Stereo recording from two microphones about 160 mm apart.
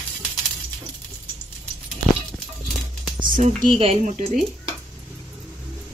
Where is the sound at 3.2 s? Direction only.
55° right (ahead or behind).